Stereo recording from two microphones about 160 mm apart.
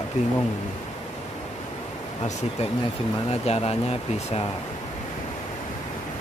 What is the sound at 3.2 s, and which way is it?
Speech, 40° left (ahead or behind).